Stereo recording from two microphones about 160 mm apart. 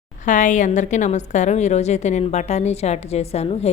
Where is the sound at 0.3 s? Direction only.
50° left (ahead or behind).